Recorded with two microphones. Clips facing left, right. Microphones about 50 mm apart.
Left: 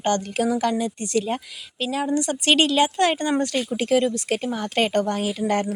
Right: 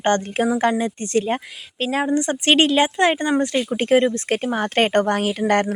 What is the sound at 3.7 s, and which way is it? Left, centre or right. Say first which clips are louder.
A woman's voice: right 4 dB; right.